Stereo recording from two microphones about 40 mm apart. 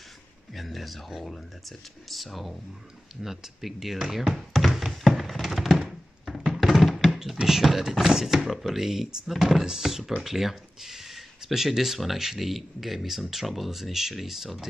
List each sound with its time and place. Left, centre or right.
0.6 s a sound: centre
1.2 s speech: centre
4.3 s thunk: centre
6.5 s music: centre
7.1 s speech: centre